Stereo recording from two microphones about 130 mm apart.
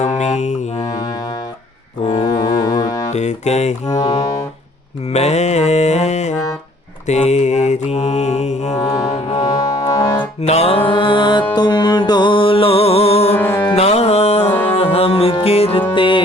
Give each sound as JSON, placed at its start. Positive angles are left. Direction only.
{"t": 0.0, "sound": "mantra", "side_deg": 65}
{"t": 0.8, "sound": "music", "side_deg": 30}
{"t": 3.1, "sound": "music", "side_deg": 60}
{"t": 3.8, "sound": "speech", "side_deg": 30}
{"t": 5.1, "sound": "mantra", "side_deg": 60}
{"t": 8.7, "sound": "mantra", "side_deg": 30}
{"t": 9.4, "sound": "music", "side_deg": 30}
{"t": 10.4, "sound": "music", "side_deg": 55}
{"t": 13.3, "sound": "music", "side_deg": 15}
{"t": 13.7, "sound": "music", "side_deg": 55}
{"t": 14.5, "sound": "music", "side_deg": 15}
{"t": 14.9, "sound": "music", "side_deg": 50}
{"t": 16.0, "sound": "music", "side_deg": 40}